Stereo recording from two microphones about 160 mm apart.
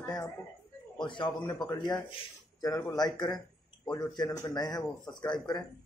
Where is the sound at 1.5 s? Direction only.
25° left (ahead or behind).